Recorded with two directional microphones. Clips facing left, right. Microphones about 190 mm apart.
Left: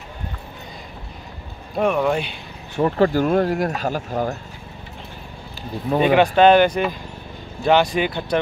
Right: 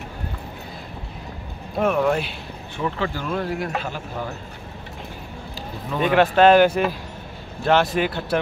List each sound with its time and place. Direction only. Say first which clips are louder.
1.8 s speech: left 1 dB; centre (ahead or behind)
2.7 s speech: left 9 dB; 40° left (ahead or behind)
5.9 s speech: left 2 dB; centre (ahead or behind)